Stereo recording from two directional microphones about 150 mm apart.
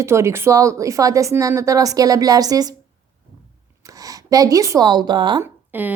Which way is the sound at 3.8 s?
25° right (ahead or behind).